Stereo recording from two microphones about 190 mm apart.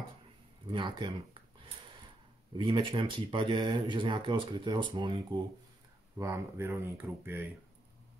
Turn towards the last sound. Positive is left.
turn(degrees=-10)  # may be behind; listen again after turning